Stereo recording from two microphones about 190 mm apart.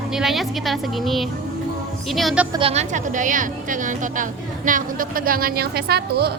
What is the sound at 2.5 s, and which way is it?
A woman's voice, 30° right (ahead or behind).